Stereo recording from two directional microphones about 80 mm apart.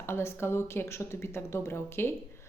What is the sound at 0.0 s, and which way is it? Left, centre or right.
Speech, left.